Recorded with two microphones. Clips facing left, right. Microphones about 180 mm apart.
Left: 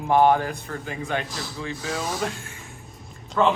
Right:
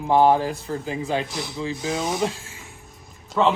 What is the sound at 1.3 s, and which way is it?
Speech, 15° right (ahead or behind).